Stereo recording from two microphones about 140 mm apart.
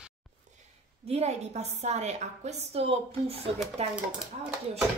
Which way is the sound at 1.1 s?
50° right (ahead or behind).